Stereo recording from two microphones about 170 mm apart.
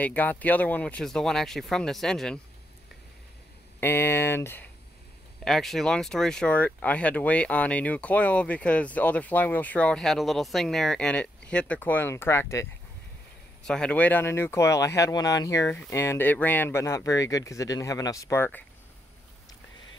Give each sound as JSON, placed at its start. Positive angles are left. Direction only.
{"t": 0.0, "sound": "speech", "side_deg": 10}
{"t": 3.8, "sound": "speech", "side_deg": 15}
{"t": 5.4, "sound": "speech", "side_deg": 0}
{"t": 13.7, "sound": "speech", "side_deg": 5}